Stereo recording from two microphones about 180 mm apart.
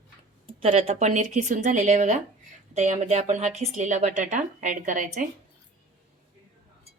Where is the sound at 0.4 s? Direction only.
30° right (ahead or behind).